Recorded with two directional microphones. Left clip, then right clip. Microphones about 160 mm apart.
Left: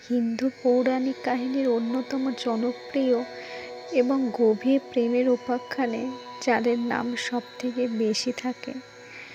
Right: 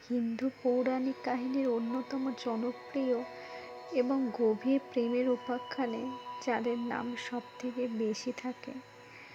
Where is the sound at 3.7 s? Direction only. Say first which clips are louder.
Left 7 dB; 50° left (ahead or behind).